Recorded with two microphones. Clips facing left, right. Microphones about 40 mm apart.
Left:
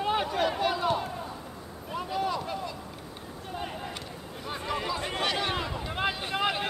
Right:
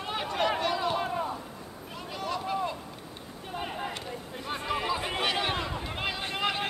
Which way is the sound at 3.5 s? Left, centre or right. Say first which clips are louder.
Right 2 dB; centre.